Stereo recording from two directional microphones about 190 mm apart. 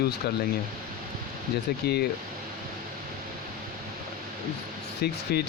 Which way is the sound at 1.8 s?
60° left (ahead or behind).